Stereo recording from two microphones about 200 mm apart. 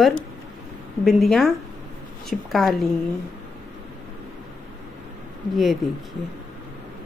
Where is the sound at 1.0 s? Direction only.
Centre (ahead or behind).